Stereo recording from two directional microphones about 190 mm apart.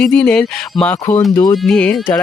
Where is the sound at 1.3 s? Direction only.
20° left (ahead or behind).